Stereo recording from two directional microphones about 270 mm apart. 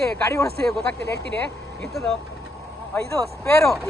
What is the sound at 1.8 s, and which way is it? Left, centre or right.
Speech, centre.